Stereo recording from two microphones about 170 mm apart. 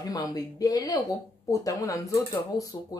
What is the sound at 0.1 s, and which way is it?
Speech, 20° left (ahead or behind).